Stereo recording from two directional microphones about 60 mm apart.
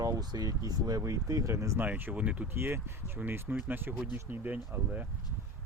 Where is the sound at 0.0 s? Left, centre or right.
Right.